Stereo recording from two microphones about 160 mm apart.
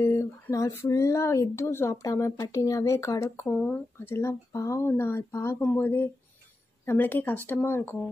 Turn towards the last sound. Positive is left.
turn(degrees=15)  # may be behind; listen again after turning